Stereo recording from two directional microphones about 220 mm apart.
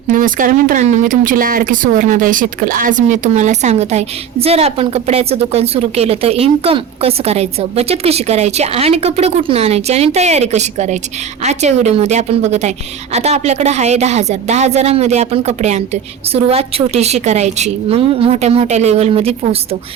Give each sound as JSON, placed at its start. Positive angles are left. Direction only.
{"t": 0.1, "sound": "a woman's voice", "side_deg": -40}